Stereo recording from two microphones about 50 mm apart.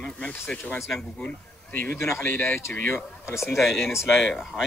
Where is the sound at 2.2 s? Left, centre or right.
Left.